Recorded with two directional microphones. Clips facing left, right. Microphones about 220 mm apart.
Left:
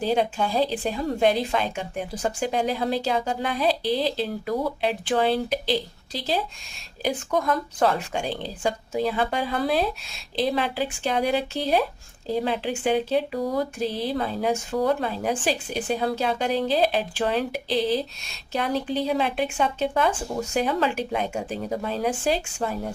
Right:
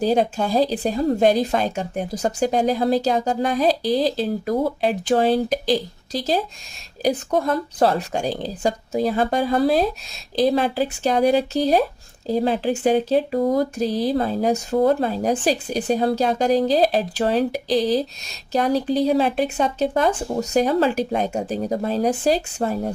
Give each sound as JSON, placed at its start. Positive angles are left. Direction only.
{"t": 0.0, "sound": "speech", "side_deg": -40}